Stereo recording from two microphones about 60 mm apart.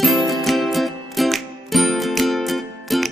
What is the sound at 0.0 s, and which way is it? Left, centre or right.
Music, centre.